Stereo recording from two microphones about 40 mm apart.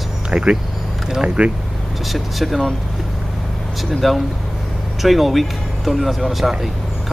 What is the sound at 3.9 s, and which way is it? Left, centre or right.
Speech, centre.